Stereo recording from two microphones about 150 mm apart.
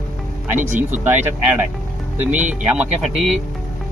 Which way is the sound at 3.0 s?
Centre (ahead or behind).